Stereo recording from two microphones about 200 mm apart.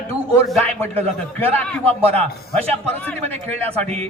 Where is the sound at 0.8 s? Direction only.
10° left (ahead or behind).